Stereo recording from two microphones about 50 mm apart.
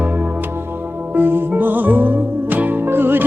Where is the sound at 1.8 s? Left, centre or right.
Right.